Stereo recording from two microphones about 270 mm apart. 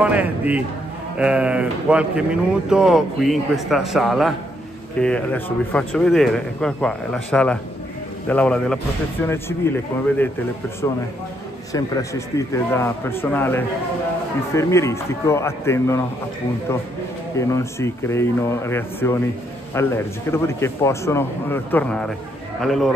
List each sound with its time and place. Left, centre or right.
0.0 s a man's voice: centre
11.7 s a man's voice: centre
17.4 s a man's voice: centre